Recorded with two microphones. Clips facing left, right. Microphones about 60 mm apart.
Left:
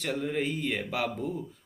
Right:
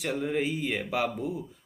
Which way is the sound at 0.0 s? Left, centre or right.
Centre.